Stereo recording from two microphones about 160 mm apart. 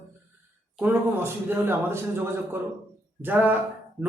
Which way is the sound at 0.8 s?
15° right (ahead or behind).